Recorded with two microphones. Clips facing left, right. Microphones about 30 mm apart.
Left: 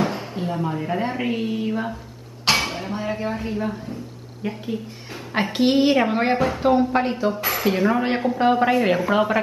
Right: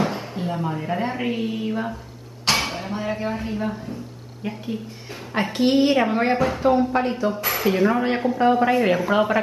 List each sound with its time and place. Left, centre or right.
0.0 s a woman's voice: centre
8.4 s a woman's voice: centre
8.7 s speech: centre